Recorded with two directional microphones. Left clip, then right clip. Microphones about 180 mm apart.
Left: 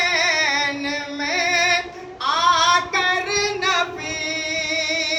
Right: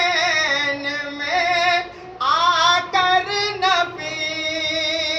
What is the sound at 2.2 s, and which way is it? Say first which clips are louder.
Child singing: right 1 dB; 25° left (ahead or behind).